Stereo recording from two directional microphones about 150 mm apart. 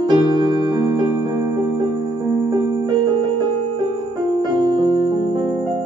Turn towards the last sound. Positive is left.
turn(degrees=-30)  # may be behind; listen again after turning